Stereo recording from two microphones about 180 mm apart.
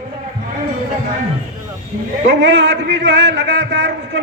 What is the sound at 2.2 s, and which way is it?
A man's voice, 85° right.